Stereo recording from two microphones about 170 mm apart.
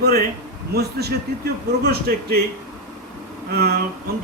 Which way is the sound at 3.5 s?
65° right (ahead or behind).